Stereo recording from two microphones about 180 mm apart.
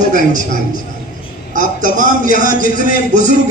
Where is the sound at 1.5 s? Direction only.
45° right (ahead or behind).